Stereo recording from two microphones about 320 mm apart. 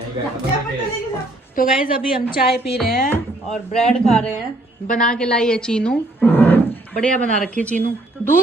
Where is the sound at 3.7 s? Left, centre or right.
Centre.